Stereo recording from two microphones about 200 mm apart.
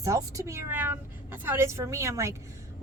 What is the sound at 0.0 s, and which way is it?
Speech, 15° right (ahead or behind).